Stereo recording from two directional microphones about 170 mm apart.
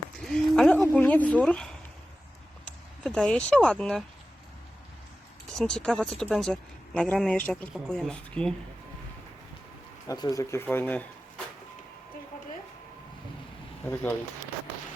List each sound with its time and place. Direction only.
0.2 s a sound: 5° left (ahead or behind)
2.6 s speech: 5° left (ahead or behind)
5.5 s speech: 5° left (ahead or behind)
10.1 s speech: 20° left (ahead or behind)
13.8 s speech: 10° left (ahead or behind)